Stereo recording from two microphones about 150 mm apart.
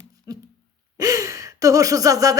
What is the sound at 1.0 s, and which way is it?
Gasp, 20° right (ahead or behind).